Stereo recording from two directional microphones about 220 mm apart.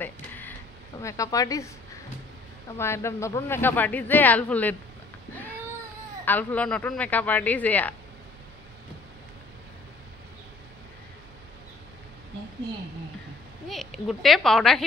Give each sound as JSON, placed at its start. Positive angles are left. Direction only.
{"t": 0.0, "sound": "a sound", "side_deg": 10}
{"t": 1.0, "sound": "a woman's voice", "side_deg": 15}
{"t": 2.8, "sound": "a woman's voice", "side_deg": 10}
{"t": 6.2, "sound": "a woman's voice", "side_deg": 5}
{"t": 13.7, "sound": "speech", "side_deg": 0}